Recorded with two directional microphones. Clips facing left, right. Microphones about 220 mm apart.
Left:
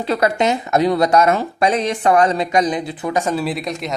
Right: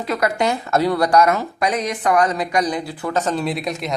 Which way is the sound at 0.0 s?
30° left (ahead or behind).